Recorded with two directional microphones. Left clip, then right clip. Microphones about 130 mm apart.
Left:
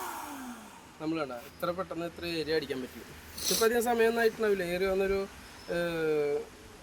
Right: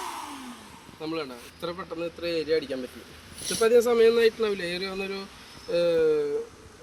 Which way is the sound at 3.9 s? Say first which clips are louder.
Right 6 dB; 30° left (ahead or behind).